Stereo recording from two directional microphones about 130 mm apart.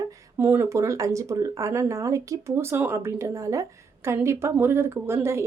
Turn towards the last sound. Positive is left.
turn(degrees=-20)  # may be behind; listen again after turning